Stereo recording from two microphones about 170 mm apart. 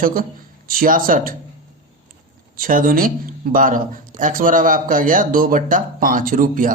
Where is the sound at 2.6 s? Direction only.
55° right (ahead or behind).